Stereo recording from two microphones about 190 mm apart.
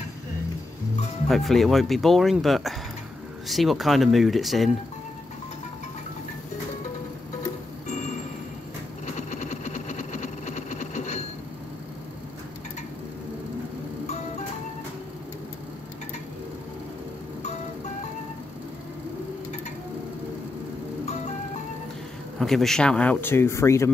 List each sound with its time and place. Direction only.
1.3 s speech: centre (ahead or behind)
9.3 s engine: 40° left (ahead or behind)
22.4 s speech: centre (ahead or behind)